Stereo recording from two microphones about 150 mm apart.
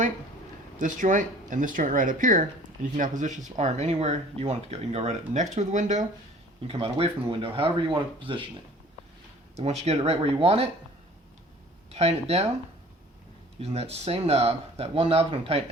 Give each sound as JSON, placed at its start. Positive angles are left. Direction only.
{"t": 0.8, "sound": "speech", "side_deg": -60}
{"t": 6.7, "sound": "speech", "side_deg": -35}
{"t": 9.6, "sound": "speech", "side_deg": -45}
{"t": 11.9, "sound": "speech", "side_deg": -45}
{"t": 13.6, "sound": "speech", "side_deg": -45}